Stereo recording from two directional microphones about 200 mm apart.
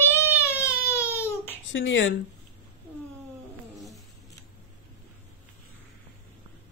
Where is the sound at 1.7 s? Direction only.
65° left (ahead or behind).